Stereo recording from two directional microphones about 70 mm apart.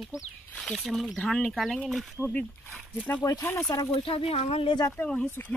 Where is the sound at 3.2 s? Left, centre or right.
Left.